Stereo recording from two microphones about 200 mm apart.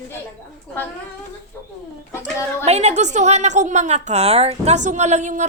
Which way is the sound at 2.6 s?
35° right (ahead or behind).